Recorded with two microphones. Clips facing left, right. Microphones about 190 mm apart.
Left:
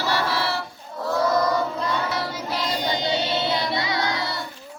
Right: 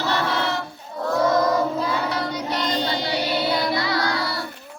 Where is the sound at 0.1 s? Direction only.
5° left (ahead or behind).